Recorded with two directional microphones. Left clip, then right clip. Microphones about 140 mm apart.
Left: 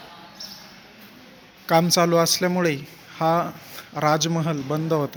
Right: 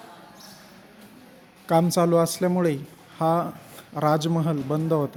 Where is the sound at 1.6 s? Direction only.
25° right (ahead or behind).